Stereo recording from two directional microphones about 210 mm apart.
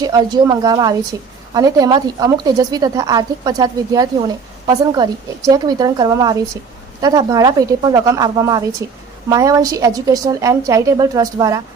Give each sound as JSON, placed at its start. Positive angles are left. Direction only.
{"t": 0.0, "sound": "a woman's voice", "side_deg": -20}